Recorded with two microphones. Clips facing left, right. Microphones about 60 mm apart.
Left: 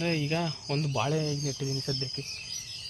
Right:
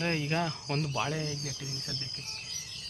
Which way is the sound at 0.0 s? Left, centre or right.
Right.